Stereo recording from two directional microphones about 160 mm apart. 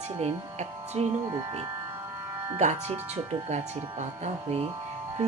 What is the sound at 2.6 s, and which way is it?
Speech, 50° right (ahead or behind).